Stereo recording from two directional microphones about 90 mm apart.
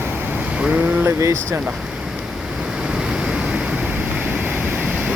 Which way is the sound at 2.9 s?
10° right (ahead or behind).